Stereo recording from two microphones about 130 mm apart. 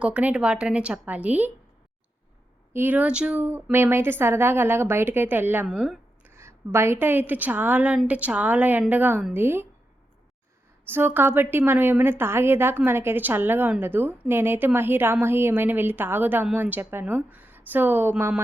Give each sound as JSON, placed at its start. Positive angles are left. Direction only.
{"t": 0.0, "sound": "a woman's voice", "side_deg": -10}
{"t": 2.7, "sound": "a woman's voice", "side_deg": -15}
{"t": 6.2, "sound": "a woman's voice", "side_deg": -20}
{"t": 10.8, "sound": "a woman's voice", "side_deg": -15}